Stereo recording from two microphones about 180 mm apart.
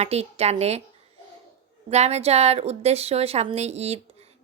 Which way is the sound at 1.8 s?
35° right (ahead or behind).